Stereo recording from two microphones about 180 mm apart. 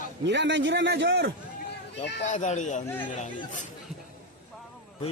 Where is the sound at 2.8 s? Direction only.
10° left (ahead or behind).